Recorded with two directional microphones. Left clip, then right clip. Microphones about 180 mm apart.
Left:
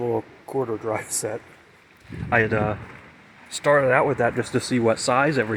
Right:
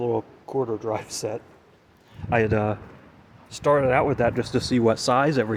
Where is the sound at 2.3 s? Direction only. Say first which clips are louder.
Left 1 dB; 25° right (ahead or behind).